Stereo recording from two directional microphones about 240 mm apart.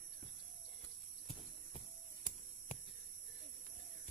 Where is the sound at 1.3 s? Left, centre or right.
Left.